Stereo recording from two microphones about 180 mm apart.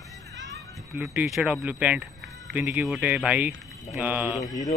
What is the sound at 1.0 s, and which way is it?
Speech, centre (ahead or behind).